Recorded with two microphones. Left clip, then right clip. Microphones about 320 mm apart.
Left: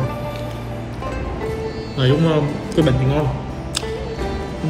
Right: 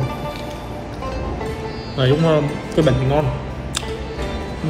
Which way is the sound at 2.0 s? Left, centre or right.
Centre.